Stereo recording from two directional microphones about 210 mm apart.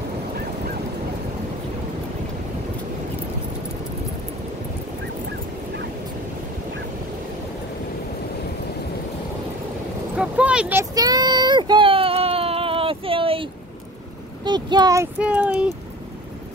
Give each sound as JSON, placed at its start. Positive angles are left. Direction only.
{"t": 10.1, "sound": "a sound", "side_deg": -5}
{"t": 14.4, "sound": "a child's voice", "side_deg": -20}
{"t": 15.1, "sound": "speech", "side_deg": -5}